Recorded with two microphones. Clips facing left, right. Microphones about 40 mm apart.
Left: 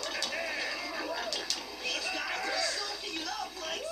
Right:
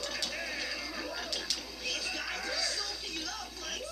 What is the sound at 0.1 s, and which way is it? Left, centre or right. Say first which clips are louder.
Music: left 3 dB; centre.